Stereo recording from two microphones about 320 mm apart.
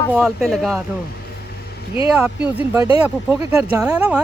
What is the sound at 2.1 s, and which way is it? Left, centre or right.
Speech, centre.